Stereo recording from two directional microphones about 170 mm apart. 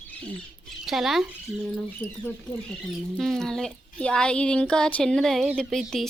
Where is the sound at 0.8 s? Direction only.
Centre (ahead or behind).